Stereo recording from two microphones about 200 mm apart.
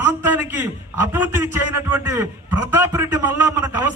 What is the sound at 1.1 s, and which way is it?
A man's voice, 10° right (ahead or behind).